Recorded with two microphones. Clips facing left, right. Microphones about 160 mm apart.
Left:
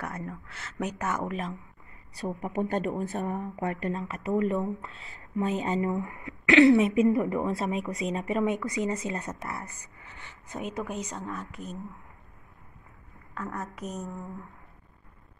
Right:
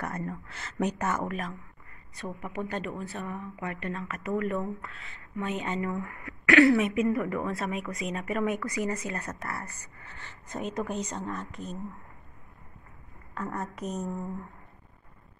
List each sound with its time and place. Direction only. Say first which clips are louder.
0.0 s speech: right 2 dB; 5° left (ahead or behind)
2.1 s a woman's voice: left 5 dB; 40° left (ahead or behind)
4.1 s speech: left 3 dB; 30° left (ahead or behind); by 11.8 s 5° left (ahead or behind)
13.3 s speech: right 1 dB; centre (ahead or behind)